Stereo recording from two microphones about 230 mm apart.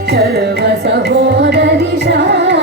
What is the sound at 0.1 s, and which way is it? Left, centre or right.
Carnatic music, right.